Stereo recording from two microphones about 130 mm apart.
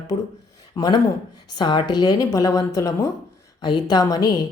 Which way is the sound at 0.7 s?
25° left (ahead or behind).